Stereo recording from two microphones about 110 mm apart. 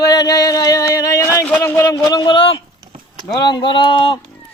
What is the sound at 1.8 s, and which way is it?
Speech, 40° left (ahead or behind).